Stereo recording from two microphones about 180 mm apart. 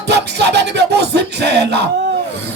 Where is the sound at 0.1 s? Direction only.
70° right (ahead or behind).